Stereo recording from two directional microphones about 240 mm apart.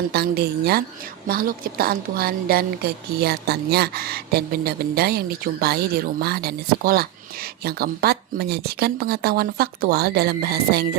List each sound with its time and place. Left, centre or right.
0.1 s a woman's voice: right